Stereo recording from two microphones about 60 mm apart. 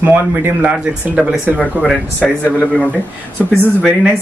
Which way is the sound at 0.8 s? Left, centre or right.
Centre.